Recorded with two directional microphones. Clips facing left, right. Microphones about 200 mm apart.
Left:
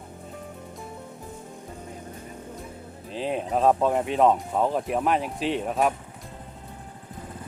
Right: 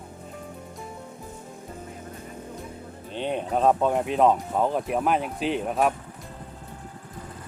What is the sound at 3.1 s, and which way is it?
Speech, centre (ahead or behind).